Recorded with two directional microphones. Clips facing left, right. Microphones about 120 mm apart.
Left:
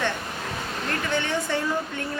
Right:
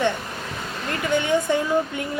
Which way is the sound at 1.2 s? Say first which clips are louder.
Right 5 dB; 15° right (ahead or behind).